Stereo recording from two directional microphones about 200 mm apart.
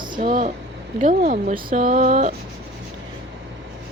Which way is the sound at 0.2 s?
40° right (ahead or behind).